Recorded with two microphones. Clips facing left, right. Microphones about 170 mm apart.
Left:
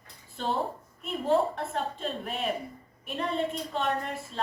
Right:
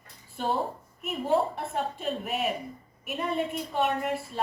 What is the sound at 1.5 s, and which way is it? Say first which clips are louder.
A woman's voice: right 1 dB; 10° right (ahead or behind).